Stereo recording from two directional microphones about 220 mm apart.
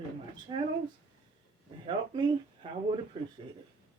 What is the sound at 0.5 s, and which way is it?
Speech, 20° right (ahead or behind).